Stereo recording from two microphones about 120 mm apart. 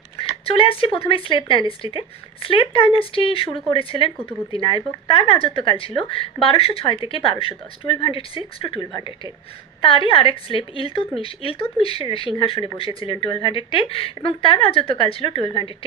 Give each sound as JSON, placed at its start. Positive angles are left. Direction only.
{"t": 0.2, "sound": "speech", "side_deg": 50}
{"t": 8.9, "sound": "speech", "side_deg": 40}